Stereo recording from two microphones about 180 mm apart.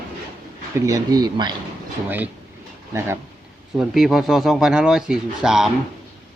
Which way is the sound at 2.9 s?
15° right (ahead or behind).